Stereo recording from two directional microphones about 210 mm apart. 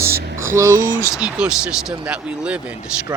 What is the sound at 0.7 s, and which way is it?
Speech, 40° right (ahead or behind).